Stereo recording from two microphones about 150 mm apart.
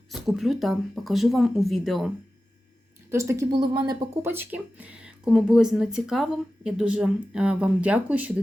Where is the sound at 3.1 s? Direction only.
20° right (ahead or behind).